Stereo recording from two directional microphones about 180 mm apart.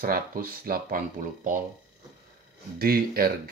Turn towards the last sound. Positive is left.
turn(degrees=-55)  # may be behind; listen again after turning